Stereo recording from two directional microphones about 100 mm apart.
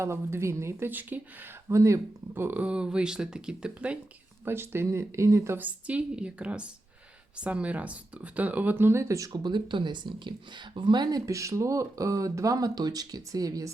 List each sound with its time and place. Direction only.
0.0 s speech: 25° right (ahead or behind)
1.7 s speech: 30° right (ahead or behind); by 3.9 s 10° right (ahead or behind)
4.4 s speech: 25° right (ahead or behind); by 11.2 s 45° right (ahead or behind)
11.3 s speech: 30° right (ahead or behind)